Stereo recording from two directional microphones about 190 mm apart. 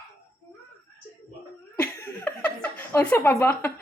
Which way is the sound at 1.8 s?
10° left (ahead or behind).